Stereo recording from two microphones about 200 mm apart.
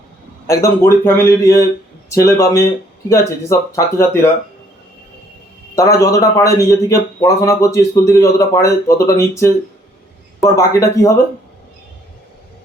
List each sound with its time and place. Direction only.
0.4 s a man's voice: 15° left (ahead or behind)
5.7 s a man's voice: 15° left (ahead or behind)